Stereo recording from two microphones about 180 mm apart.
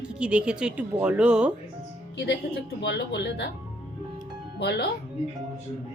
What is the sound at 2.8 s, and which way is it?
Speech, 70° left (ahead or behind).